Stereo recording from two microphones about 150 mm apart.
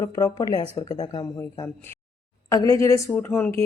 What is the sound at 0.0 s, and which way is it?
Speech, 20° left (ahead or behind).